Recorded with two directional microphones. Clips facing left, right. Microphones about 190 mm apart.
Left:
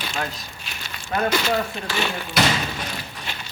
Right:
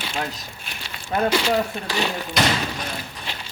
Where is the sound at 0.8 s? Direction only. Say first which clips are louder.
Right 2 dB; 30° right (ahead or behind).